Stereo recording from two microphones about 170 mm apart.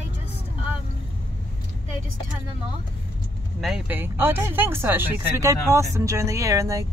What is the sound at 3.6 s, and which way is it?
Speech, 5° right (ahead or behind).